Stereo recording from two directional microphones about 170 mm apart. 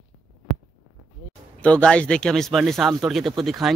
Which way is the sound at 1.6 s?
5° left (ahead or behind).